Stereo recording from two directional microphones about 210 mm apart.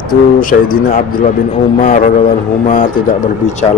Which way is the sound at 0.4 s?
40° left (ahead or behind).